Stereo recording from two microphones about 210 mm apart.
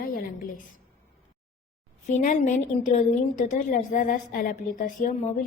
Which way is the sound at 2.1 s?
35° left (ahead or behind).